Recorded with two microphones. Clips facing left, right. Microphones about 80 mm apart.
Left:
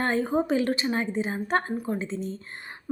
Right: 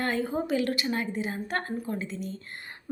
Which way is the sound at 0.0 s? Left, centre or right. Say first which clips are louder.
Left 4 dB; left.